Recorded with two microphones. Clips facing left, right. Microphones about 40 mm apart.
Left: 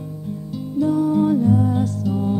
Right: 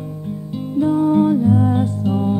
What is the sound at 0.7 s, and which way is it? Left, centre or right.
Music, right.